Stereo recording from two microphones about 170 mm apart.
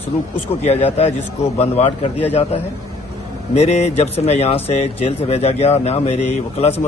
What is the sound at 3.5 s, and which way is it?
Speech, 40° left (ahead or behind).